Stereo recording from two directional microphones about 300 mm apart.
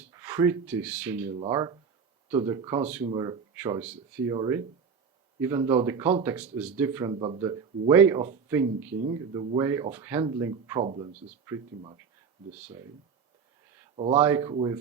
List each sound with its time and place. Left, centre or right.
0.1 s speech: centre
13.9 s speech: centre